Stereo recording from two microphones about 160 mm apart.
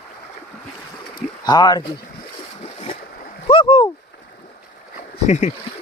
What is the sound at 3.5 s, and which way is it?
Rowboat, 35° left (ahead or behind).